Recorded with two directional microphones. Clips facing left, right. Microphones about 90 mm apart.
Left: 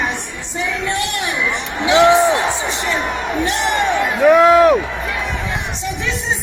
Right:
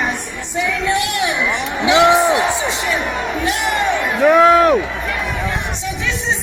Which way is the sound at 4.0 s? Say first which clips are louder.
Left 1 dB; centre (ahead or behind).